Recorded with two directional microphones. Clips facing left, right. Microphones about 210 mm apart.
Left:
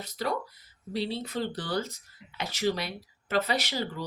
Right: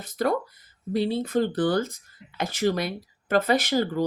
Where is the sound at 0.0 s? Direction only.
50° right (ahead or behind).